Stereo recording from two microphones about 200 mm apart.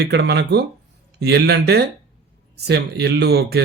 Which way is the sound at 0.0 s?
55° right (ahead or behind).